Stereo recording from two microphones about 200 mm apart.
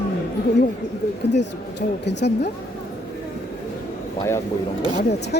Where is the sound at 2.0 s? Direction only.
60° left (ahead or behind).